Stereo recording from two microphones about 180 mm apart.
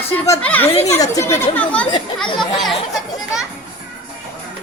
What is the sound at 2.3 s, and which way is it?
Speech, centre (ahead or behind).